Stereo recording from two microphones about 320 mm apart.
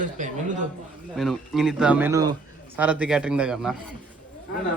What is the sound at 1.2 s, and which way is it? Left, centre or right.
Speech, centre.